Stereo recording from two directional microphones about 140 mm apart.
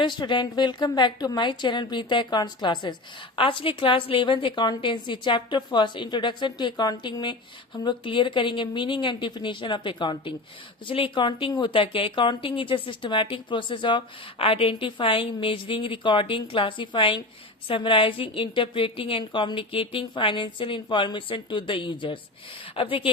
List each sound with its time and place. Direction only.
0.0 s a woman's voice: 35° left (ahead or behind)